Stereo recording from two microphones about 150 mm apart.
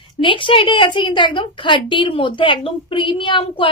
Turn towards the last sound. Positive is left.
turn(degrees=35)  # may be behind; listen again after turning